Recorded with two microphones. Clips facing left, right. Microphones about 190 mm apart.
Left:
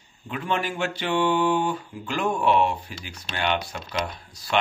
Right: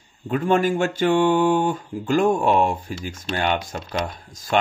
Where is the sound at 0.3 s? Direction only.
45° right (ahead or behind).